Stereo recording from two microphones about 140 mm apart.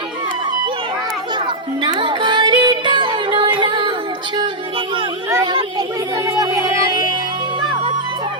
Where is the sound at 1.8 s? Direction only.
35° right (ahead or behind).